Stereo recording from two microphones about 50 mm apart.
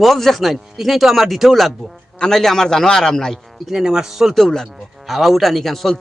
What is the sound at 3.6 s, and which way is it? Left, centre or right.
Speech, centre.